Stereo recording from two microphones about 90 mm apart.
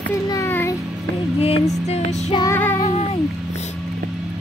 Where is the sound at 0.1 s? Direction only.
35° left (ahead or behind).